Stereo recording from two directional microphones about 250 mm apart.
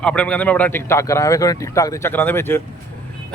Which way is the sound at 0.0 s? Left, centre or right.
Centre.